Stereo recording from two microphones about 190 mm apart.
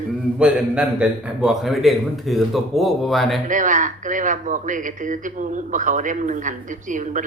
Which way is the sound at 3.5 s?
40° right (ahead or behind).